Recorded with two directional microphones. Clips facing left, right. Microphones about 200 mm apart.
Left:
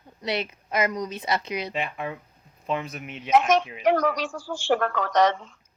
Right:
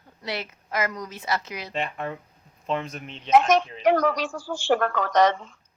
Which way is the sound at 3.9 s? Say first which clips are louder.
Right 1 dB; 50° right (ahead or behind).